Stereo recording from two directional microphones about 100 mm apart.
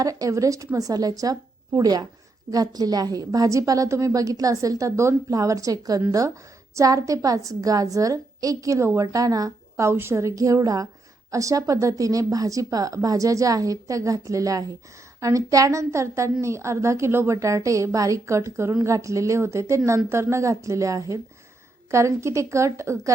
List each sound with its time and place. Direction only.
0.0 s a woman's voice: 35° right (ahead or behind)